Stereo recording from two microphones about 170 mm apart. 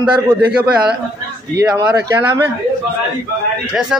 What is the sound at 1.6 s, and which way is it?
Speech, 20° right (ahead or behind).